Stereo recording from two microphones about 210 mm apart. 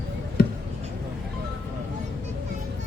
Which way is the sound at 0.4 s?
45° left (ahead or behind).